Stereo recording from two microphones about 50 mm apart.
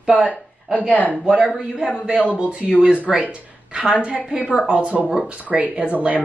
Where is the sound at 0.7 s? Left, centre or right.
Left.